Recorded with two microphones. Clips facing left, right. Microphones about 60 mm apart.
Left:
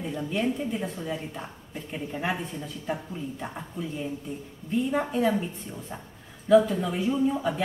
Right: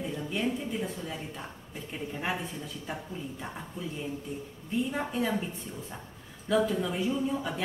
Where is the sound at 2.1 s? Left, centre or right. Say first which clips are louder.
Left 4 dB; centre.